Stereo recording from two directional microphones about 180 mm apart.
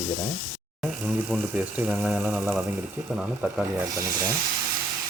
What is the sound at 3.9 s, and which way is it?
Speech, 20° right (ahead or behind).